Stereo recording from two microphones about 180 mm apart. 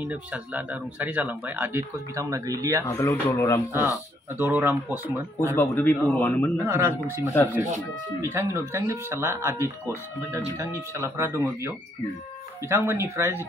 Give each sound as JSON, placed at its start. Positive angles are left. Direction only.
{"t": 0.0, "sound": "speech", "side_deg": -10}
{"t": 2.9, "sound": "a man's voice", "side_deg": 15}
{"t": 4.4, "sound": "speech", "side_deg": -10}
{"t": 5.5, "sound": "a man's voice", "side_deg": 10}
{"t": 6.6, "sound": "speech", "side_deg": -15}
{"t": 8.2, "sound": "speech", "side_deg": -15}